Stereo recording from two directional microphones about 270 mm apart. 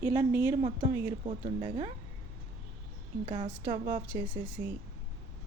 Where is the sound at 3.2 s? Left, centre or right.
Right.